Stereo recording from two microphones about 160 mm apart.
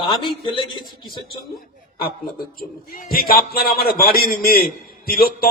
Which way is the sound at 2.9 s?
65° left (ahead or behind).